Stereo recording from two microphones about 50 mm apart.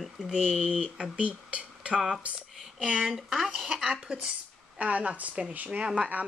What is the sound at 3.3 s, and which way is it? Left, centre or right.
Speech, centre.